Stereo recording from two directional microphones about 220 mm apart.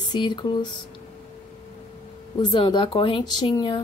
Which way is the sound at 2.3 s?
20° left (ahead or behind).